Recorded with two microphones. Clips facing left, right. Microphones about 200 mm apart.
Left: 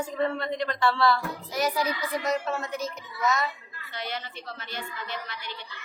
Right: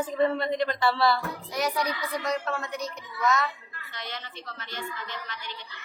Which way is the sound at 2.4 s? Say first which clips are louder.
Left 1 dB; 20° left (ahead or behind).